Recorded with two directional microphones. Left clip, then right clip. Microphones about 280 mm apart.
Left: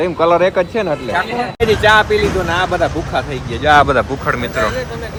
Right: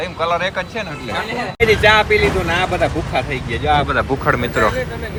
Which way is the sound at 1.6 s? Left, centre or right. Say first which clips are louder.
Left 1 dB; centre.